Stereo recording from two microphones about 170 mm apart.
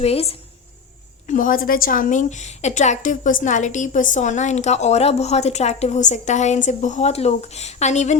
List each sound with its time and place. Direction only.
0.0 s a woman's voice: 35° left (ahead or behind)
1.3 s a woman's voice: 50° left (ahead or behind)